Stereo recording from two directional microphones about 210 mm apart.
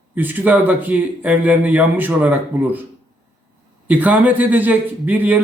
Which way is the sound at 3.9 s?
5° right (ahead or behind).